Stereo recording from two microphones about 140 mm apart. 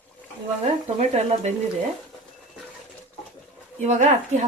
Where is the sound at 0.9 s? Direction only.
55° right (ahead or behind).